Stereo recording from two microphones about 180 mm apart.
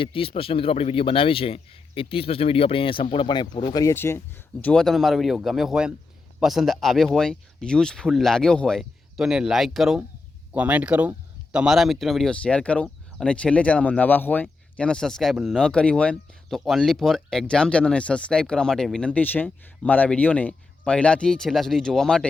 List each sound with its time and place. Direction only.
0.0 s speech: 30° left (ahead or behind); by 22.3 s 5° left (ahead or behind)